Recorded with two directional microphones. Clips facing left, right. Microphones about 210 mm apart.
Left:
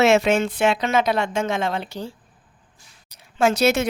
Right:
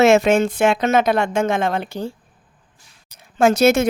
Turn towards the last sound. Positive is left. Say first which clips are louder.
# right 4 dB
turn(degrees=-45)  # may be behind; listen again after turning